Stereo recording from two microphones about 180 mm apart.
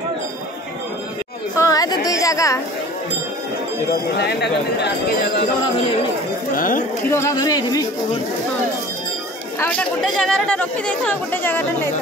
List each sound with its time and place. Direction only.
1.6 s chatter: 20° left (ahead or behind)
2.0 s a sound: 20° left (ahead or behind)
4.2 s speech: 65° left (ahead or behind)
6.5 s speech: 50° left (ahead or behind)
7.1 s speech: 15° left (ahead or behind)
9.6 s speech: 5° left (ahead or behind)